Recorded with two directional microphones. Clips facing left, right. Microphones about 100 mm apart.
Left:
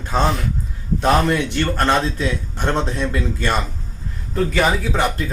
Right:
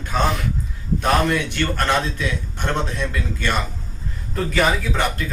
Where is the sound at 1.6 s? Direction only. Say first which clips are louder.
Left 3 dB; 25° left (ahead or behind).